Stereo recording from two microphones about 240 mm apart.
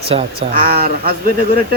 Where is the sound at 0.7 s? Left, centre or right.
Right.